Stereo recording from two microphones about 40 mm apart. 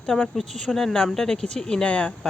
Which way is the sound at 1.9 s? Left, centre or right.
Left.